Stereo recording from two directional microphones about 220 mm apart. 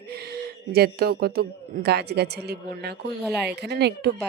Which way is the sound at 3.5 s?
50° right (ahead or behind).